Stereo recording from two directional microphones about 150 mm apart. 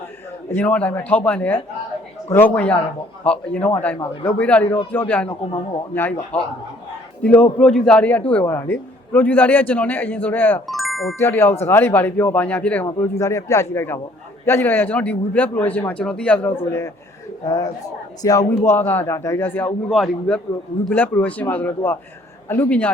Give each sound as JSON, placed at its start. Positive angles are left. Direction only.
{"t": 0.5, "sound": "a man's voice", "side_deg": 10}
{"t": 10.7, "sound": "music", "side_deg": 0}
{"t": 11.2, "sound": "a man's voice", "side_deg": 15}
{"t": 19.9, "sound": "a man's voice", "side_deg": 5}